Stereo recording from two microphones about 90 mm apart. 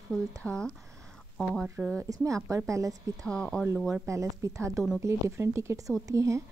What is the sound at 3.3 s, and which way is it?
Speech, 10° left (ahead or behind).